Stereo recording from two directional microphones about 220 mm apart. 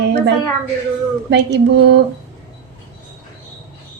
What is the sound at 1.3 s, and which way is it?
Speech, 50° right (ahead or behind).